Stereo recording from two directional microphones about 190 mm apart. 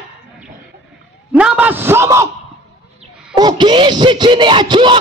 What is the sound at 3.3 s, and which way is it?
Speech, 25° right (ahead or behind).